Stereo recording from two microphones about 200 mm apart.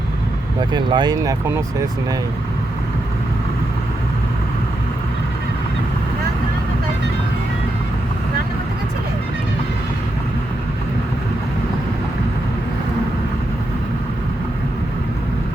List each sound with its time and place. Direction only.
0.7 s speech: 20° right (ahead or behind)